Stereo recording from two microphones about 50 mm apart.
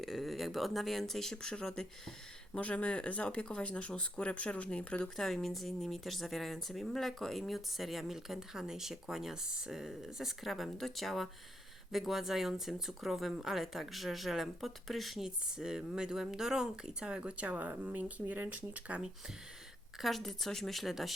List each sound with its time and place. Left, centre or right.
0.0 s speech: centre
2.5 s speech: left
5.0 s speech: centre
15.5 s speech: centre; by 19.0 s right
20.0 s speech: centre